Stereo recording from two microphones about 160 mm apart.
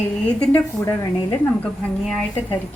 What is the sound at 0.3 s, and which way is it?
Speech, 5° left (ahead or behind).